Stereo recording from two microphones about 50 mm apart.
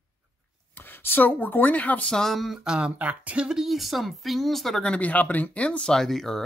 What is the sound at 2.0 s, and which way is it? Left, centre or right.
Speech, centre.